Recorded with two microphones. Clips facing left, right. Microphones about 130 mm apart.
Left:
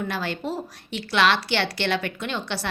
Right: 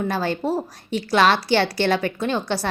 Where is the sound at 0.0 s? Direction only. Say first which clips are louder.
Right 5 dB; 40° right (ahead or behind).